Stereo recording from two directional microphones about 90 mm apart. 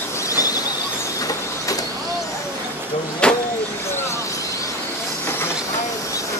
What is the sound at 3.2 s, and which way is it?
Vehicle, 10° left (ahead or behind).